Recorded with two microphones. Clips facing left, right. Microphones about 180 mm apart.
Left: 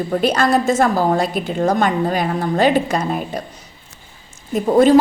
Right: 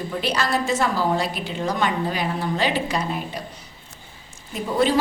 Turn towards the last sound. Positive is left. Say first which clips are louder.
# left 9 dB
turn(degrees=45)  # may be behind; listen again after turning